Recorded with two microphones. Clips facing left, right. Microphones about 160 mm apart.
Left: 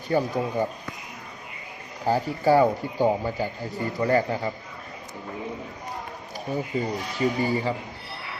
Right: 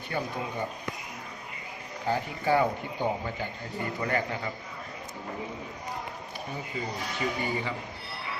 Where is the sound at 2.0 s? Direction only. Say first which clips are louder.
Left 6 dB; 35° left (ahead or behind).